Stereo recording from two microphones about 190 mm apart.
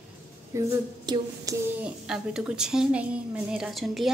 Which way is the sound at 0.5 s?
15° right (ahead or behind).